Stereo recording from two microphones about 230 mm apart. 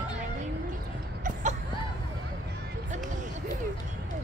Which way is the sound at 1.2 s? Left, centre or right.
Right.